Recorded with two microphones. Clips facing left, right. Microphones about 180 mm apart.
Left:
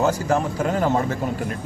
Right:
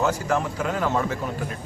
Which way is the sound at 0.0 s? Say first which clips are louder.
Left 3 dB; 35° left (ahead or behind).